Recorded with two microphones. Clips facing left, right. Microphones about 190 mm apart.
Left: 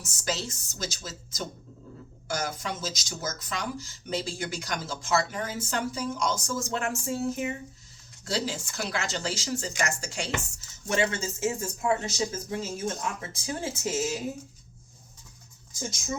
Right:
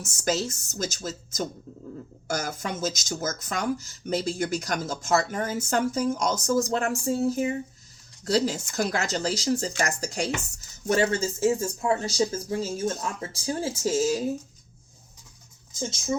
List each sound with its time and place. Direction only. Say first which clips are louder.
0.3 s speech: right 6 dB; 45° right (ahead or behind)